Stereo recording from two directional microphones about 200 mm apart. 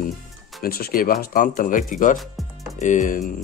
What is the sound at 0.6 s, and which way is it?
Speech, 50° left (ahead or behind).